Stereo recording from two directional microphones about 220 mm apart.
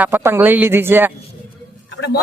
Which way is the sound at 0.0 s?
10° right (ahead or behind).